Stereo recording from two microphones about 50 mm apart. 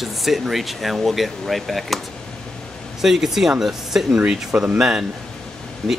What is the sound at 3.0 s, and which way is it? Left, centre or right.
Speech, centre.